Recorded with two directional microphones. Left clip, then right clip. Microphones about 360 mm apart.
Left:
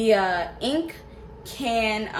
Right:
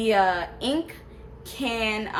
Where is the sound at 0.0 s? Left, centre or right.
Centre.